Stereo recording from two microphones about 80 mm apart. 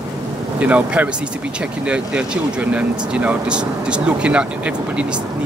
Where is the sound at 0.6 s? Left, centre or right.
Centre.